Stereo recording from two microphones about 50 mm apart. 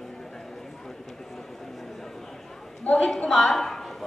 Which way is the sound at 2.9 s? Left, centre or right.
Left.